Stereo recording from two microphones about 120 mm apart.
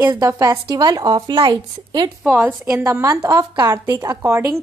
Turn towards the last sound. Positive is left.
turn(degrees=-20)  # may be behind; listen again after turning